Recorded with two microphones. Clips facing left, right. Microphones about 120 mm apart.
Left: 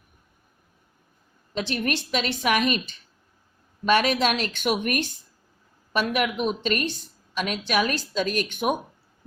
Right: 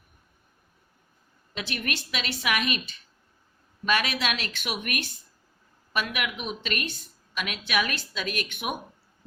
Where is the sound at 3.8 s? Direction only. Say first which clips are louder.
Left 6 dB; 40° left (ahead or behind).